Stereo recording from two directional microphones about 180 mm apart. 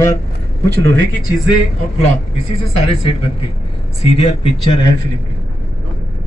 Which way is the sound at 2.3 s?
35° left (ahead or behind).